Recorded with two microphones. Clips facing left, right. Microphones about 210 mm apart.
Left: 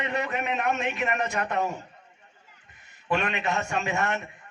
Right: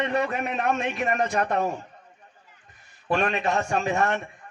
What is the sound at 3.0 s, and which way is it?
A man's voice, 40° right (ahead or behind).